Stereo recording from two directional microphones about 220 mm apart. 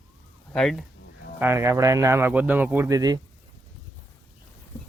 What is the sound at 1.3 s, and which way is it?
Speech, 10° right (ahead or behind).